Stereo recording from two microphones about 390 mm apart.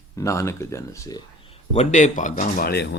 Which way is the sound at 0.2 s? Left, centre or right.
Centre.